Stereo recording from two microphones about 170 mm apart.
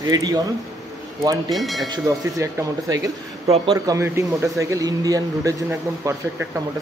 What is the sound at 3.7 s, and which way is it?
Speech, 20° right (ahead or behind).